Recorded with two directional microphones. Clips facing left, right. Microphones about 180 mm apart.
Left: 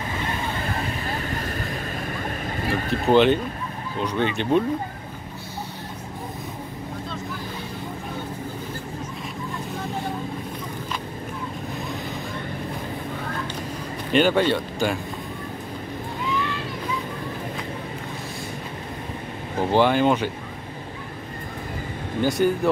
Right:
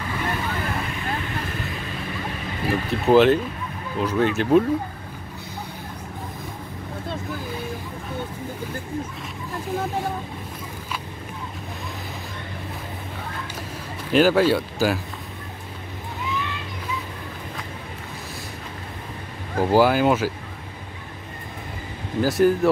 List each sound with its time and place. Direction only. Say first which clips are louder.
1.2 s vehicle: left 1 dB; 45° left (ahead or behind)
2.7 s speech: right 2 dB; centre (ahead or behind)
14.1 s speech: right 2 dB; 5° right (ahead or behind)
19.6 s speech: right 1 dB; 5° right (ahead or behind)
22.2 s speech: right 3 dB; centre (ahead or behind)